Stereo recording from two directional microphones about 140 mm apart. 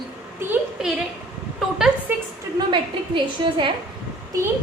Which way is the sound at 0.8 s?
5° right (ahead or behind).